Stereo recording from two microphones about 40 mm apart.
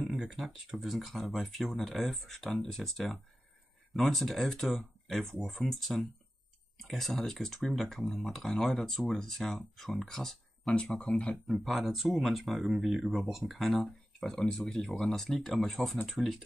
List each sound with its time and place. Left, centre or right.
0.7 s speech: centre
11.1 s speech: left
11.4 s speech: centre